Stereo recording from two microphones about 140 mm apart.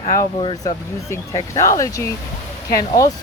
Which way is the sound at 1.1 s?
20° left (ahead or behind).